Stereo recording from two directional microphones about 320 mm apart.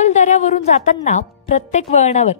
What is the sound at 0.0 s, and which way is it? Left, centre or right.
A woman's voice, left.